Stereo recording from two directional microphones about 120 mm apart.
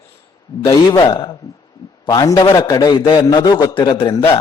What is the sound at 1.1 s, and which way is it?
A man's voice, 35° left (ahead or behind).